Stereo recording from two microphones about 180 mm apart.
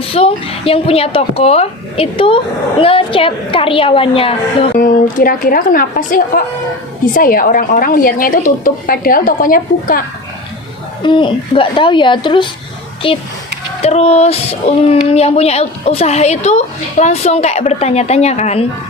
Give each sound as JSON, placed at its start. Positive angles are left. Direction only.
{"t": 0.0, "sound": "speech", "side_deg": 30}
{"t": 4.8, "sound": "a woman's voice", "side_deg": 55}
{"t": 11.0, "sound": "speech", "side_deg": 25}